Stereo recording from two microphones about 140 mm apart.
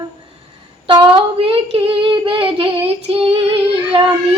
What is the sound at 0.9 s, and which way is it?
Child singing, 35° right (ahead or behind).